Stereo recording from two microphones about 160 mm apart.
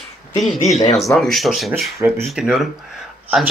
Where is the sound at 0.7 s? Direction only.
45° left (ahead or behind).